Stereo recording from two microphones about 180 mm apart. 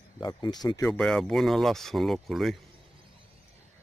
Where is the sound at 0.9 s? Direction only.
5° left (ahead or behind).